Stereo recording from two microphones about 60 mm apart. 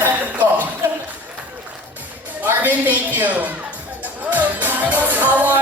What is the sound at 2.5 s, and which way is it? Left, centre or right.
A woman's voice, right.